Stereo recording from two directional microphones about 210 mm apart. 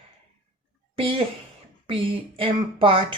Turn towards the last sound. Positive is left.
turn(degrees=-25)  # may be behind; listen again after turning